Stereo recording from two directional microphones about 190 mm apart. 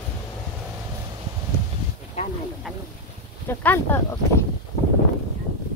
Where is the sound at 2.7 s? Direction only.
5° right (ahead or behind).